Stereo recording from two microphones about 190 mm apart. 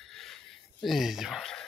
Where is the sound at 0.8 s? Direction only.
Centre (ahead or behind).